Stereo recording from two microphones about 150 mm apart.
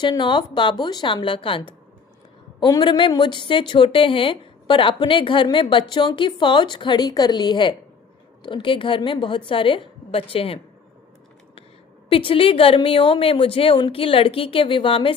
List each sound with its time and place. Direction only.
0.0 s speech: 30° left (ahead or behind)
12.0 s speech: 35° left (ahead or behind)